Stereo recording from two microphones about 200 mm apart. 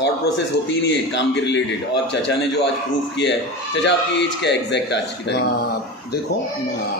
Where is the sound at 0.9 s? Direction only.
60° left (ahead or behind).